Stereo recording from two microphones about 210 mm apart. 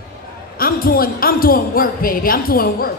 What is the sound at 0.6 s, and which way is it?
Speech, 45° left (ahead or behind).